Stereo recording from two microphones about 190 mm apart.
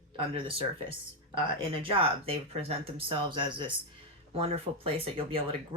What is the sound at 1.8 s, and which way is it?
Speech, 30° right (ahead or behind).